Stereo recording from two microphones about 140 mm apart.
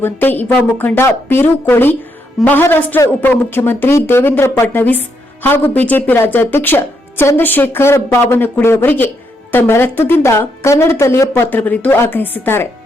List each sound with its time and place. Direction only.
0.0 s a woman's voice: 15° left (ahead or behind)